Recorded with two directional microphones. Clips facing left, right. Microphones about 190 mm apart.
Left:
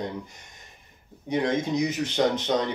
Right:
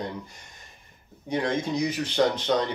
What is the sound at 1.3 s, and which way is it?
Speech, 20° left (ahead or behind).